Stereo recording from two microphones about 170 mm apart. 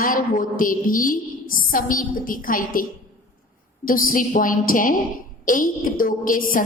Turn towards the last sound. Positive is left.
turn(degrees=55)  # may be behind; listen again after turning